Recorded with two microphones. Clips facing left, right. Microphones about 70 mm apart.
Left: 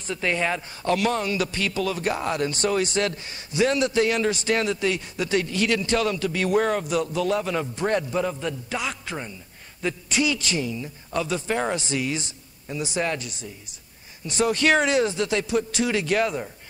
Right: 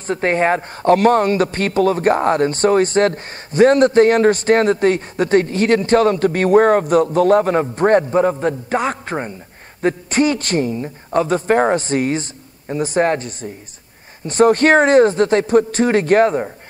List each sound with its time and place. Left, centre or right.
0.0 s a man's voice: right